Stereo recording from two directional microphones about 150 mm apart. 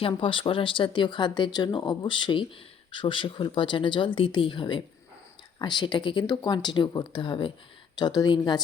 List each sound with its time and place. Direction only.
0.0 s speech: 35° left (ahead or behind)